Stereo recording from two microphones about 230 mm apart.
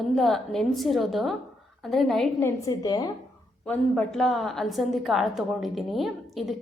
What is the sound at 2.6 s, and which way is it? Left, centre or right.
Speech, centre.